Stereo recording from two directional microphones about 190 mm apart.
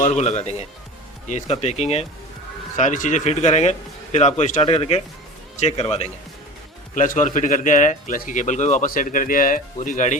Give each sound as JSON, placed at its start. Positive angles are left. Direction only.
{"t": 0.0, "sound": "a man's voice", "side_deg": 35}